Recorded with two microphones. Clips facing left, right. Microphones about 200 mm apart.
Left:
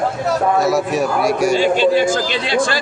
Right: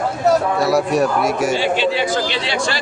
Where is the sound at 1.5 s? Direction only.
45° left (ahead or behind).